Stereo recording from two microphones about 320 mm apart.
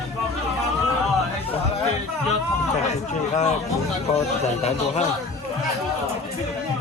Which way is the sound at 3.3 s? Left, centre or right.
Left.